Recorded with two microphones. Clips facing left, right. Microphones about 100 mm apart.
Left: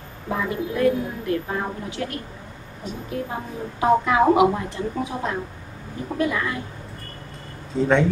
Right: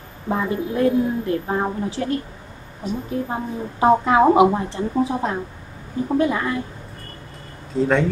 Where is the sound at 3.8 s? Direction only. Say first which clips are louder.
Right 3 dB; 30° right (ahead or behind).